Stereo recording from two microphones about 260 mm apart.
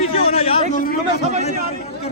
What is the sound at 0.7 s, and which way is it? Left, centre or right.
Speech, left.